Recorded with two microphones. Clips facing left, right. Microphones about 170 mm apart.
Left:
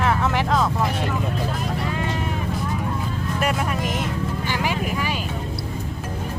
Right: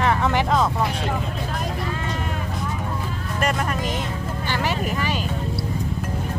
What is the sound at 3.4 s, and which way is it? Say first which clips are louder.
Speech: right 1 dB; 5° left (ahead or behind).